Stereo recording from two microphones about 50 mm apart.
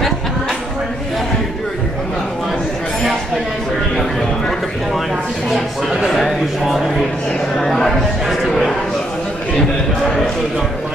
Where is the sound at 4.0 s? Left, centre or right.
Centre.